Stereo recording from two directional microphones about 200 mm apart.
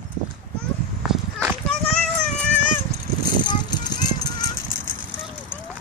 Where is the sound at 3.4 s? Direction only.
20° left (ahead or behind).